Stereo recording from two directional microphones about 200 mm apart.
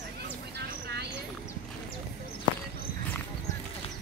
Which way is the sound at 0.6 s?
55° right (ahead or behind).